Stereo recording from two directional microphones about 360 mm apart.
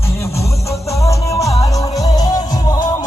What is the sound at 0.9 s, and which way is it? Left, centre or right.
Music, centre.